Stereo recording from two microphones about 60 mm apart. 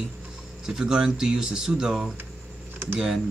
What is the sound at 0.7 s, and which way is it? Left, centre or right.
Speech, centre.